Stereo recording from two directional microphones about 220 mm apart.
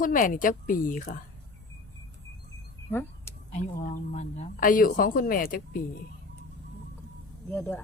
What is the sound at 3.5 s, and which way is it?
Speech, 35° left (ahead or behind).